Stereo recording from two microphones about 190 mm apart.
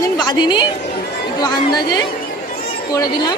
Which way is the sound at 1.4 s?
20° left (ahead or behind).